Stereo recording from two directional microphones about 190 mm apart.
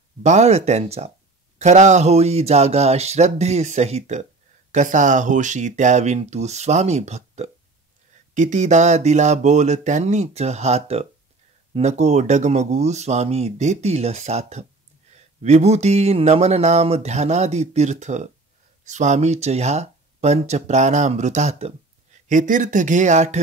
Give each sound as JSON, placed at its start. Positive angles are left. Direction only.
{"t": 0.2, "sound": "speech", "side_deg": -35}